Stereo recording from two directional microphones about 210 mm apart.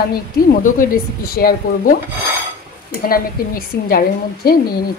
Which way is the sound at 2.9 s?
45° left (ahead or behind).